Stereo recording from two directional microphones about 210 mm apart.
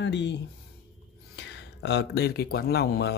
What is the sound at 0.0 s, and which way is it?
Speech, 55° left (ahead or behind).